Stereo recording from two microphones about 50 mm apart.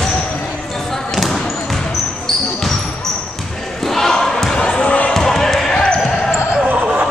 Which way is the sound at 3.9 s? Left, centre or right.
Centre.